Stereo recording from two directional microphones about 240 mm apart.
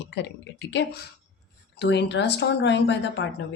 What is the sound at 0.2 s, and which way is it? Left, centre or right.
Speech, left.